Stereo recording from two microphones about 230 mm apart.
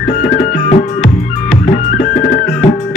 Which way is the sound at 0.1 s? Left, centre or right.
Left.